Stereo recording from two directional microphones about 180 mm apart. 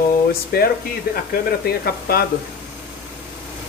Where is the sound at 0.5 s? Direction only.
60° left (ahead or behind).